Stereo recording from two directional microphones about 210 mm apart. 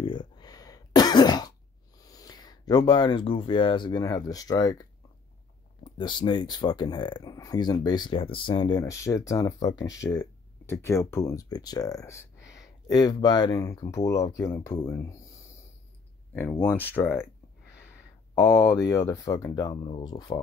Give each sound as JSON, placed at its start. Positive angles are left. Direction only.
{"t": 0.0, "sound": "cough", "side_deg": 20}
{"t": 2.0, "sound": "speech", "side_deg": 15}
{"t": 5.9, "sound": "speech", "side_deg": 20}
{"t": 16.3, "sound": "speech", "side_deg": 5}